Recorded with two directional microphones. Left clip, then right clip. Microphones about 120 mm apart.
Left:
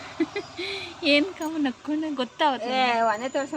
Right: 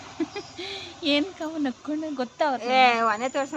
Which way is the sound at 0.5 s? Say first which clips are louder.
Left 3 dB; 25° right (ahead or behind).